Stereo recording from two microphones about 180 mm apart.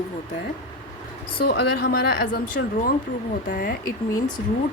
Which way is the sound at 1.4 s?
65° left (ahead or behind).